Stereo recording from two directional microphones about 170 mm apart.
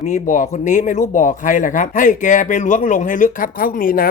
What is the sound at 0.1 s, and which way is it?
Speech, 50° left (ahead or behind).